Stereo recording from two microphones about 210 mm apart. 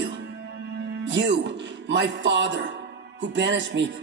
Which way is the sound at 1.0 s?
60° right (ahead or behind).